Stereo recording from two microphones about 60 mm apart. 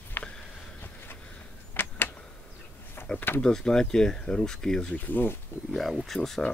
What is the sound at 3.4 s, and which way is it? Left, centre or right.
Speech, centre.